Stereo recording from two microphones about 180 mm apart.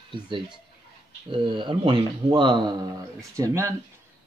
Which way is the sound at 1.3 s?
25° right (ahead or behind).